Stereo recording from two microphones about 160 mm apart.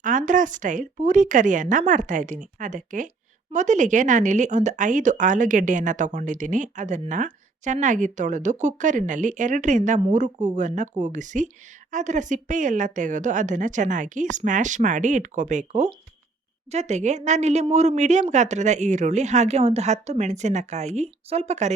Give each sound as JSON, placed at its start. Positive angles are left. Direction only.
{"t": 0.0, "sound": "speech", "side_deg": -55}